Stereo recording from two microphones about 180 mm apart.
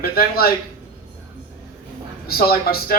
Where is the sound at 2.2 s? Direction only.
55° left (ahead or behind).